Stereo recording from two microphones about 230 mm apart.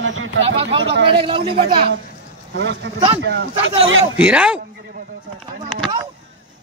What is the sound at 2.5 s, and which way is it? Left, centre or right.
Speech, right.